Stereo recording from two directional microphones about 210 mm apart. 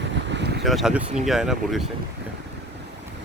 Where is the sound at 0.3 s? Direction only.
55° right (ahead or behind).